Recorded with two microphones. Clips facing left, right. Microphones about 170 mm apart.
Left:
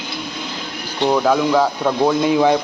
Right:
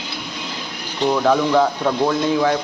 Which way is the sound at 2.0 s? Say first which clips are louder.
Left 4 dB; 15° left (ahead or behind).